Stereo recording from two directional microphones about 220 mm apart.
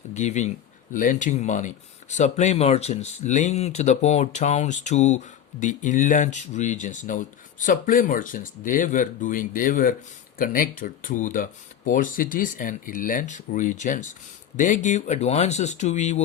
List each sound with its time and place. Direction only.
0.1 s speech: 30° left (ahead or behind)